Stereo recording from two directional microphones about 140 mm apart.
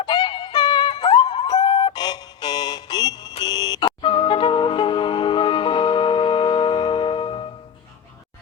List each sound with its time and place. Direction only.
0.0 s music: 30° left (ahead or behind)